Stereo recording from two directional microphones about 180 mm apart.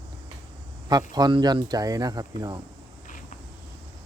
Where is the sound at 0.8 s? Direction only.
20° right (ahead or behind).